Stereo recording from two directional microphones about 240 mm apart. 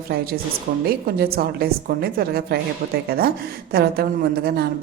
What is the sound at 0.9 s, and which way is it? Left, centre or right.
A woman's voice, right.